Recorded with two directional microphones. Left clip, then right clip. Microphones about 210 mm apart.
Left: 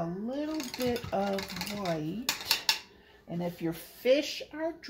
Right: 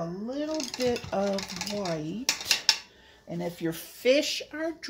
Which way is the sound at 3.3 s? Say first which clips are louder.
Right 2 dB; 45° right (ahead or behind).